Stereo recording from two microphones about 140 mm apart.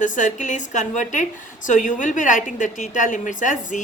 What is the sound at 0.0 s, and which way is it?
A woman's voice, 65° left (ahead or behind).